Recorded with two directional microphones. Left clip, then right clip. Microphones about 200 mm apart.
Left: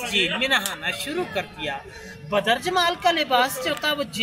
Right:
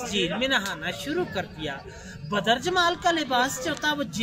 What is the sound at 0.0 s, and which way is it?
Speech, 25° right (ahead or behind).